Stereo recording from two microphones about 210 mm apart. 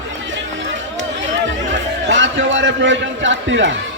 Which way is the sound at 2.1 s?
65° right (ahead or behind).